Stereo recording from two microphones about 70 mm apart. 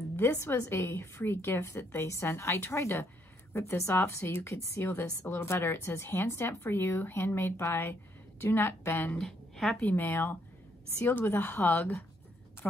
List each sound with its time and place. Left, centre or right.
0.1 s speech: left
9.2 s a woman's voice: centre
9.8 s speech: left